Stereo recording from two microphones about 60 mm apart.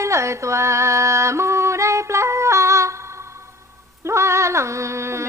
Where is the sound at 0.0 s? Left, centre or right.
Right.